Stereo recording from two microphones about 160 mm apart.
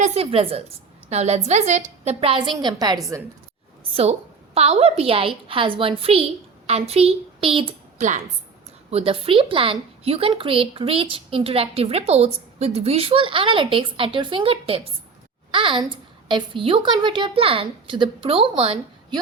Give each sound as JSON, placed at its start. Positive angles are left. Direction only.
{"t": 0.0, "sound": "a woman's voice", "side_deg": -40}
{"t": 4.5, "sound": "a woman's voice", "side_deg": -40}